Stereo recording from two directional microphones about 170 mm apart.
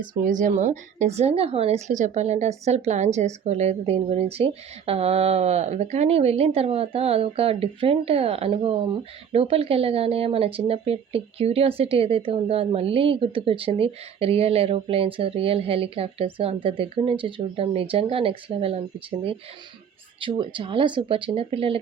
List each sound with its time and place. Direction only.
0.0 s speech: 50° right (ahead or behind); by 21.8 s 35° right (ahead or behind)